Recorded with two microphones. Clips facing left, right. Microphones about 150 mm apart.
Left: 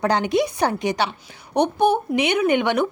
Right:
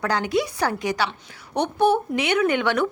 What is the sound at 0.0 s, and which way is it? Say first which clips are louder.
A woman's voice: left 3 dB; 20° left (ahead or behind).